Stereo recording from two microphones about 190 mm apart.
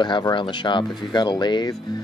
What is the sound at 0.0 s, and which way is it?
Speech, 25° left (ahead or behind).